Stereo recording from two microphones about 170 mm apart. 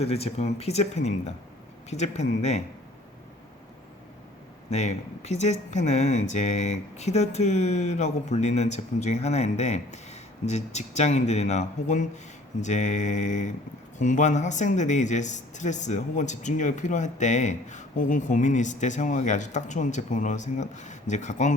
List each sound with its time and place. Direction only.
0.0 s speech: 35° left (ahead or behind)
4.7 s speech: 40° left (ahead or behind)